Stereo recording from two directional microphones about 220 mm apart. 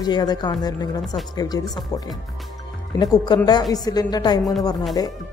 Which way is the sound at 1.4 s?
15° left (ahead or behind).